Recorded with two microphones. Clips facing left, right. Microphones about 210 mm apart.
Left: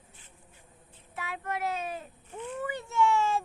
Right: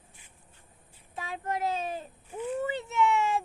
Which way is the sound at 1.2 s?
30° right (ahead or behind).